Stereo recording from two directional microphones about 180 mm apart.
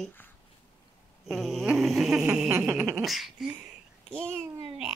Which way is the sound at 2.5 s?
15° right (ahead or behind).